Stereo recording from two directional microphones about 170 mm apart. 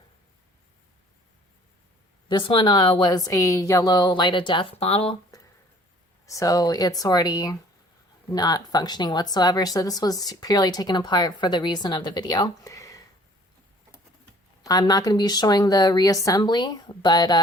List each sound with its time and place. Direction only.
2.3 s speech: 30° left (ahead or behind)
5.3 s a sound: 20° left (ahead or behind)
6.2 s speech: 20° left (ahead or behind)
14.6 s speech: 25° left (ahead or behind)